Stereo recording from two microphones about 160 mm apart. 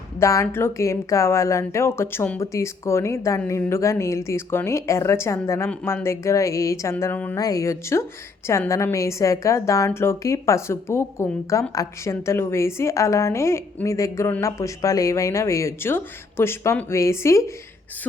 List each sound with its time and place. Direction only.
0.2 s a woman's voice: 20° left (ahead or behind)
7.3 s a woman's voice: 20° left (ahead or behind)